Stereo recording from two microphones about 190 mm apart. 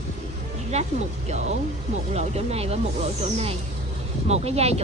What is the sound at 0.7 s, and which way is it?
Speech, 35° right (ahead or behind).